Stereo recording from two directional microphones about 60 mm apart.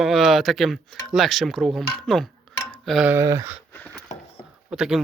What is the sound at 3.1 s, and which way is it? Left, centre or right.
Speech, right.